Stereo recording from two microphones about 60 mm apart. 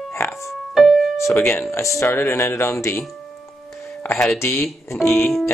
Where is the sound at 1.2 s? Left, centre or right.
Left.